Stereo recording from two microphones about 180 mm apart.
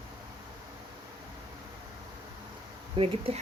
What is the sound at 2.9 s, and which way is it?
Speech, 30° right (ahead or behind).